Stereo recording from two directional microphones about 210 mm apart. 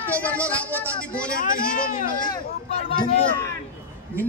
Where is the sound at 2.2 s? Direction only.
25° left (ahead or behind).